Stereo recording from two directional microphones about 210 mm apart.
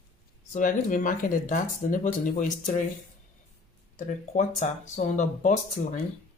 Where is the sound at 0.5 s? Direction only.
40° left (ahead or behind).